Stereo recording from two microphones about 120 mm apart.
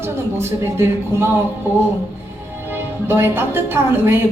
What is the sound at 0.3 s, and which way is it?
Speech, 20° right (ahead or behind).